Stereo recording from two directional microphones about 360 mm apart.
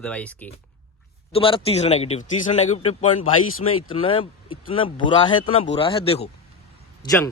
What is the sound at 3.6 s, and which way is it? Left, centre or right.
Speech, left.